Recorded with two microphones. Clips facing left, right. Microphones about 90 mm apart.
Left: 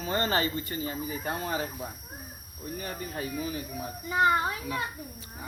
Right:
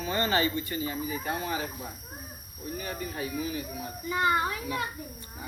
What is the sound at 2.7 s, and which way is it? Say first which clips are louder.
Speech: even; 45° left (ahead or behind).